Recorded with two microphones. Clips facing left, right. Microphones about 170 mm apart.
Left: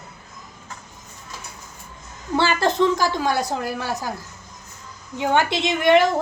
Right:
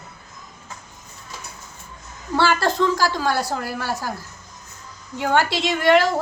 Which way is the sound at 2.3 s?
20° left (ahead or behind).